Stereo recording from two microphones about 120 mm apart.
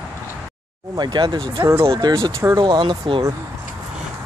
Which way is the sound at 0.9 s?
40° right (ahead or behind).